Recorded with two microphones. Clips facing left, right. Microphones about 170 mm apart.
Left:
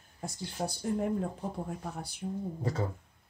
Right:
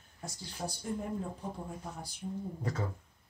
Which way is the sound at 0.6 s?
40° left (ahead or behind).